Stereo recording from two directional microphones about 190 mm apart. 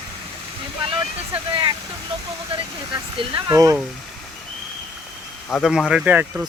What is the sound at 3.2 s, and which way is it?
Speech, 20° right (ahead or behind).